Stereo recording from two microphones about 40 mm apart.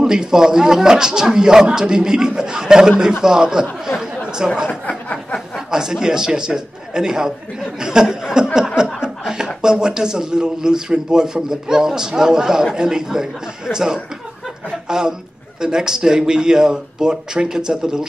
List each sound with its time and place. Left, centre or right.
0.0 s a man's voice: centre
3.8 s chatter: centre
4.8 s a sound: left
5.7 s a man's voice: centre
7.8 s a sound: centre
8.7 s chuckle: centre
9.6 s a man's voice: centre